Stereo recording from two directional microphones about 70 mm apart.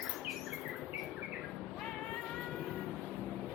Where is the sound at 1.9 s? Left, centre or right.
Centre.